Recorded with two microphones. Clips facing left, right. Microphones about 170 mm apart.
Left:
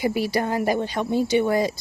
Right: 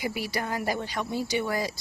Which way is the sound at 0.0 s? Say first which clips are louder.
Left 8 dB; 30° left (ahead or behind).